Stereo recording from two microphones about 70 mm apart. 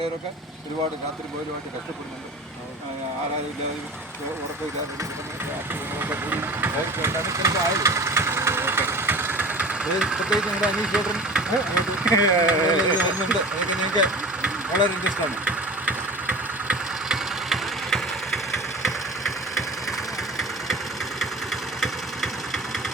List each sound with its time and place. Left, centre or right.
6.0 s speech: right
7.3 s engine: right; by 12.1 s centre
12.5 s speech: centre
17.1 s engine: centre
19.5 s engine: centre